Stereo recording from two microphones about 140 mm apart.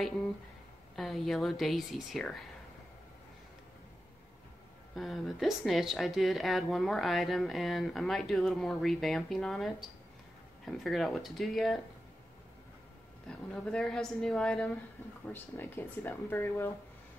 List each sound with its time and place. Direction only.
0.9 s speech: centre (ahead or behind)
4.9 s speech: centre (ahead or behind)
13.5 s speech: 5° left (ahead or behind)
15.2 s speech: 15° left (ahead or behind)